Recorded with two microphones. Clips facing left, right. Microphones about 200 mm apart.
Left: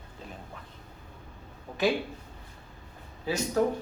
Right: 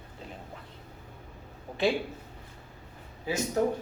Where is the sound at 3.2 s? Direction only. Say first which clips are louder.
Left 1 dB; 20° right (ahead or behind).